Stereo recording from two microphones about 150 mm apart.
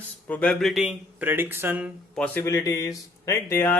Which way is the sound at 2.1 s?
5° left (ahead or behind).